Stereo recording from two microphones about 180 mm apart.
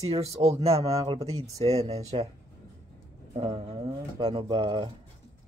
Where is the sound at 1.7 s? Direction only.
35° right (ahead or behind).